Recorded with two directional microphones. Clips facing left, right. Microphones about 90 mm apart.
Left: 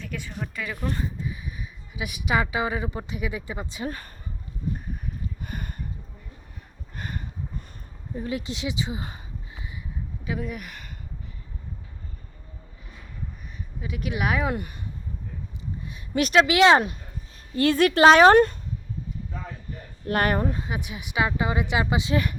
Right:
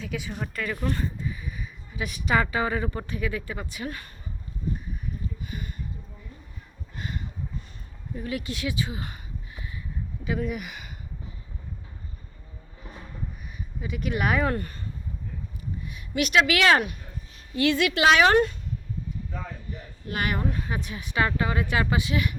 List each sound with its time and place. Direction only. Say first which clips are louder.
0.0 s speech: right 2 dB; 5° right (ahead or behind)
0.6 s speech: right 1 dB; 5° left (ahead or behind); by 4.1 s 35° left (ahead or behind)
5.4 s a sound: left 1 dB; 50° left (ahead or behind)
6.9 s a sound: even; 45° left (ahead or behind)
8.1 s speech: left 1 dB; 25° left (ahead or behind)
10.2 s speech: right 2 dB; centre (ahead or behind)
13.8 s speech: right 1 dB; centre (ahead or behind)
15.8 s speech: left 3 dB; 35° left (ahead or behind)
17.5 s speech: left 3 dB; 40° left (ahead or behind)
19.7 s speech: left 8 dB; 45° left (ahead or behind)
20.7 s speech: even; 10° left (ahead or behind)
22.0 s speech: left 3 dB; 35° left (ahead or behind)